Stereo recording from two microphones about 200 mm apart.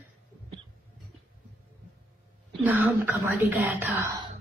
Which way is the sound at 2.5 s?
10° right (ahead or behind).